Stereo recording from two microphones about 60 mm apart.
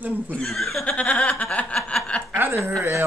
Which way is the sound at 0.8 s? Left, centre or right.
Left.